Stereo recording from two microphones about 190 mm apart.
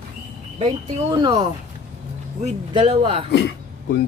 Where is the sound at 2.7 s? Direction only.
30° right (ahead or behind).